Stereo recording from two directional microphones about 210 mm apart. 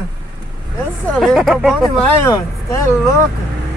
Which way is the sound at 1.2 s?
Centre (ahead or behind).